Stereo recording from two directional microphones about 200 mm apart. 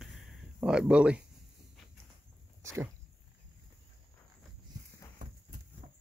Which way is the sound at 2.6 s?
10° right (ahead or behind).